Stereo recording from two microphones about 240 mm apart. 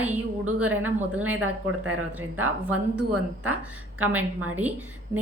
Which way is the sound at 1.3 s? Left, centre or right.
Right.